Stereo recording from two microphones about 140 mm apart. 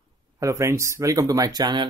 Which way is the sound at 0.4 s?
20° right (ahead or behind).